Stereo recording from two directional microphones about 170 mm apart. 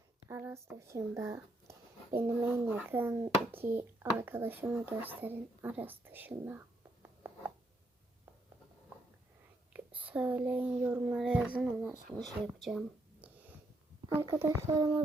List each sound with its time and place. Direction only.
0.3 s speech: 15° right (ahead or behind)
6.3 s whispering: 10° right (ahead or behind)
10.1 s speech: 10° right (ahead or behind)
13.2 s snort: 10° right (ahead or behind)
14.2 s speech: 15° right (ahead or behind)